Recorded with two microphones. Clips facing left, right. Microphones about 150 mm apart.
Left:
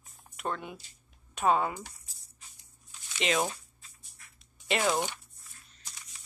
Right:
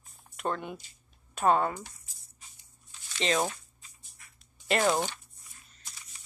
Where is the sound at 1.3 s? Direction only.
5° left (ahead or behind).